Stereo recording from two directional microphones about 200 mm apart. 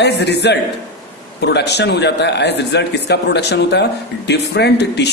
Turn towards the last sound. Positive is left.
turn(degrees=55)  # may be behind; listen again after turning